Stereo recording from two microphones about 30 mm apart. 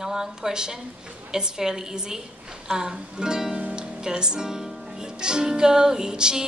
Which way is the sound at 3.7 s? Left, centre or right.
Right.